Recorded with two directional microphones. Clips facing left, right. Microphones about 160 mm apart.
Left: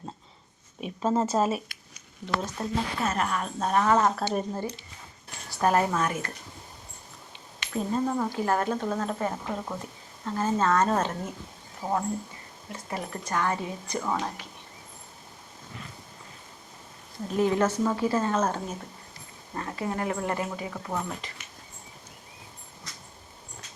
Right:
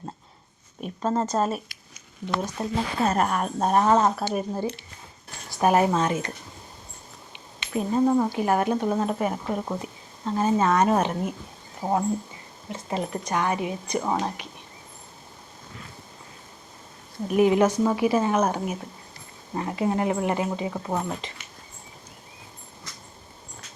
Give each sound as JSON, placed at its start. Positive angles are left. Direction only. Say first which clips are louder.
{"t": 0.8, "sound": "speech", "louder": "even", "side_deg": 5}
{"t": 2.6, "sound": "speech", "louder": "right 3 dB", "side_deg": -15}
{"t": 3.0, "sound": "a woman's voice", "louder": "right 8 dB", "side_deg": -40}
{"t": 3.8, "sound": "speech", "louder": "right 2 dB", "side_deg": -20}
{"t": 4.2, "sound": "speech", "louder": "right 2 dB", "side_deg": -10}
{"t": 7.6, "sound": "speech", "louder": "right 5 dB", "side_deg": -15}
{"t": 17.2, "sound": "speech", "louder": "right 5 dB", "side_deg": -15}